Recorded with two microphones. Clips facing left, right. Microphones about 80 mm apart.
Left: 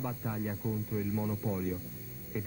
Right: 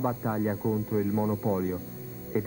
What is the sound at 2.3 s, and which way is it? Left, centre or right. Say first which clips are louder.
Music: right 9 dB; right.